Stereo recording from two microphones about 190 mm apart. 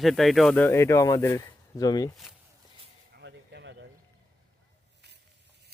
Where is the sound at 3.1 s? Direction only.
65° right (ahead or behind).